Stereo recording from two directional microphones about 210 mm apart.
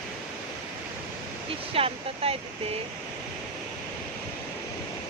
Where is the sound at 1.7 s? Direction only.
25° right (ahead or behind).